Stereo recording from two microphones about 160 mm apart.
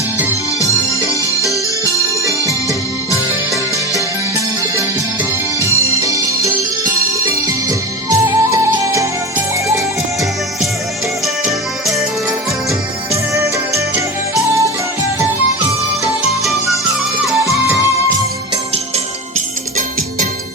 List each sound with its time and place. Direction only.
1.4 s music: 20° left (ahead or behind)
2.2 s music: 20° right (ahead or behind)
5.5 s music: 20° right (ahead or behind)
13.3 s music: 20° right (ahead or behind)
16.4 s music: centre (ahead or behind)